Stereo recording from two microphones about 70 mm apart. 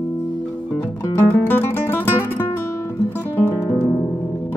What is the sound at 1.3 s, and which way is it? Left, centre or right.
Guitar, left.